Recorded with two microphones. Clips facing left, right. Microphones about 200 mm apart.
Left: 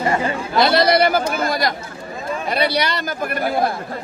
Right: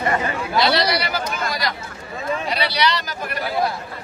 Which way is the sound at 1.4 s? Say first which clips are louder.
Left 5 dB; 50° left (ahead or behind).